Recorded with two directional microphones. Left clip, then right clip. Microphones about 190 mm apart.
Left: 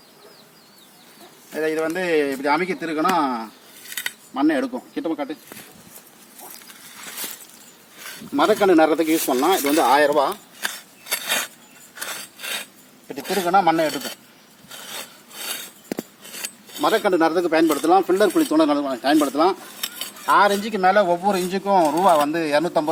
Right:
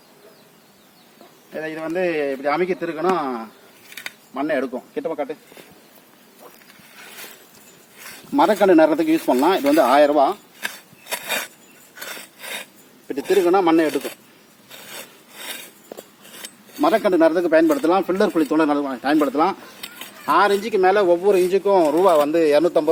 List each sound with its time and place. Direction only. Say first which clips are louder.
1.5 s speech: left 2 dB; 5° right (ahead or behind)
4.4 s speech: left 1 dB; 35° right (ahead or behind)
8.4 s speech: right 2 dB; 50° right (ahead or behind)
11.1 s a sound: left 1 dB; 10° left (ahead or behind)
11.9 s filing: left 2 dB; 10° left (ahead or behind)
13.1 s speech: right 4 dB; 60° right (ahead or behind)
16.8 s speech: right 2 dB; 55° right (ahead or behind); by 19.5 s 40° right (ahead or behind)
20.2 s speech: even; 55° right (ahead or behind)